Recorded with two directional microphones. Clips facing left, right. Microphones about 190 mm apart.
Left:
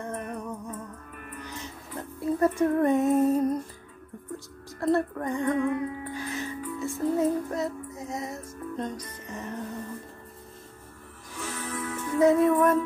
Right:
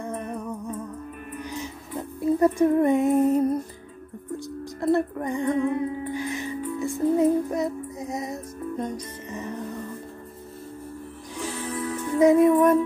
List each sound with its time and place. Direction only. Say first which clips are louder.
0.0 s music: right 3 dB; 10° right (ahead or behind)
1.4 s female singing: right 7 dB; 15° right (ahead or behind)
4.8 s music: right 2 dB; 15° right (ahead or behind)
11.3 s music: right 4 dB; 15° right (ahead or behind)
11.6 s music: right 4 dB; 30° right (ahead or behind)
12.2 s music: right 4 dB; 15° right (ahead or behind)